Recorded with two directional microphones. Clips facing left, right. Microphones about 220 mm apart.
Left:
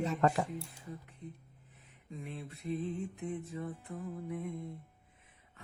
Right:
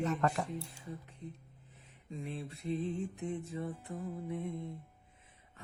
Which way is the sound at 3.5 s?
30° right (ahead or behind).